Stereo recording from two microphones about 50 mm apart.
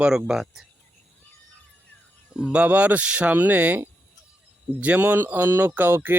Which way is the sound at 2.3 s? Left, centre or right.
Centre.